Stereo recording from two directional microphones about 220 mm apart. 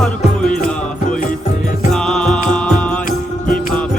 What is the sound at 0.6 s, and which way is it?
Music, 35° left (ahead or behind).